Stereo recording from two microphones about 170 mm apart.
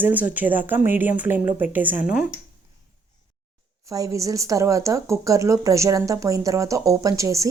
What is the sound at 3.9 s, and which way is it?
A woman's voice, 20° right (ahead or behind).